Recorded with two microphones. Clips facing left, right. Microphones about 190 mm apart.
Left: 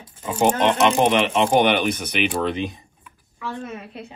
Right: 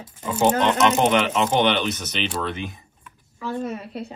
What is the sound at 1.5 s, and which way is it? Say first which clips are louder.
Speech: left 3 dB; 50° left (ahead or behind).